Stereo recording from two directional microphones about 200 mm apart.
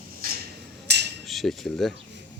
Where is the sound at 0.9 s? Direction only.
55° right (ahead or behind).